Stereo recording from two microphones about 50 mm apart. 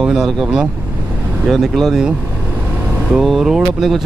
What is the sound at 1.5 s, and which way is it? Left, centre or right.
Speech, centre.